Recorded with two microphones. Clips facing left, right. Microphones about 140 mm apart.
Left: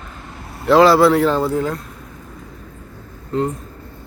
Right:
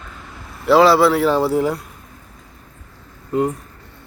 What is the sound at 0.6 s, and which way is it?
Speech, centre (ahead or behind).